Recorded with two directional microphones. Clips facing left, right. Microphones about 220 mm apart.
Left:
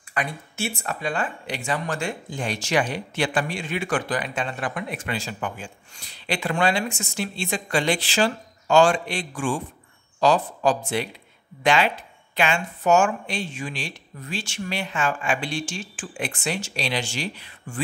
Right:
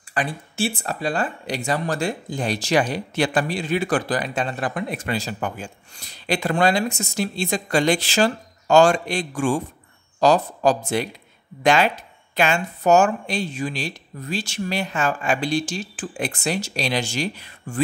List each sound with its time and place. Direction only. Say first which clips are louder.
0.1 s speech: right 3 dB; 30° right (ahead or behind)